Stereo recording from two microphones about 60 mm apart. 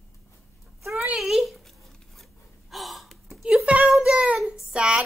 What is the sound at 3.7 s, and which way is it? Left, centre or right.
Speech, centre.